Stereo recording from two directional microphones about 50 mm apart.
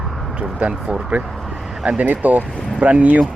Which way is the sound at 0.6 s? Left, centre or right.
Right.